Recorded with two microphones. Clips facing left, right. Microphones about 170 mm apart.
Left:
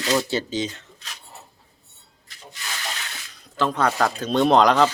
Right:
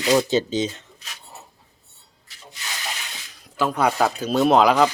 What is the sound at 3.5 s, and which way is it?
Speech, 10° right (ahead or behind).